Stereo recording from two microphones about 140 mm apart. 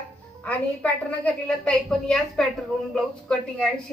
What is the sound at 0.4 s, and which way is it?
A woman's voice, 10° left (ahead or behind).